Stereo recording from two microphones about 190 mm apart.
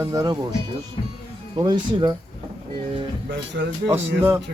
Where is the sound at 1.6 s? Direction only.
20° right (ahead or behind).